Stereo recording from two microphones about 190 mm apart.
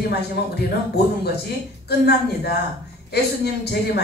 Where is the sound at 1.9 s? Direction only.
60° left (ahead or behind).